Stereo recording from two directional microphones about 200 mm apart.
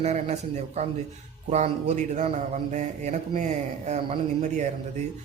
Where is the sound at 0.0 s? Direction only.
35° right (ahead or behind).